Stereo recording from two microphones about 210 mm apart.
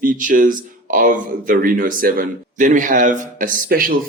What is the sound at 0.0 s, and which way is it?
Speech, 40° right (ahead or behind).